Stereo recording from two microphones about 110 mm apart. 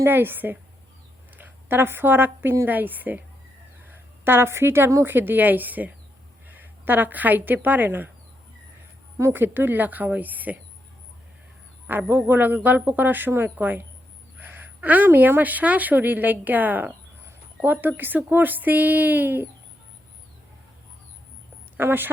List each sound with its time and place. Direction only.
0.0 s a woman's voice: 20° right (ahead or behind)
9.1 s a man's voice: 20° right (ahead or behind)
11.9 s a man's voice: 20° right (ahead or behind)
21.8 s a woman's voice: 20° right (ahead or behind)